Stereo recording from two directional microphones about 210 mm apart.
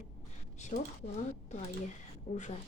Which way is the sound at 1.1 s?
35° left (ahead or behind).